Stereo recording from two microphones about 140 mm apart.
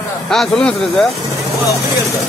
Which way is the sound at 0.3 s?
5° left (ahead or behind).